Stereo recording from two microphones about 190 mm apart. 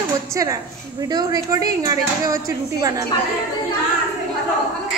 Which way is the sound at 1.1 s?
20° right (ahead or behind).